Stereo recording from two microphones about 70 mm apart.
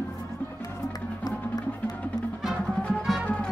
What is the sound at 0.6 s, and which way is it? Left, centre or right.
Music, left.